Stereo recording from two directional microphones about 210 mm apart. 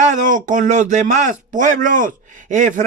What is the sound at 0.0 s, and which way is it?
A man's voice, 35° right (ahead or behind).